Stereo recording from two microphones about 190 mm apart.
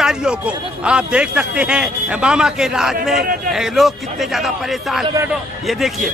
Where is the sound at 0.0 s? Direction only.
5° right (ahead or behind).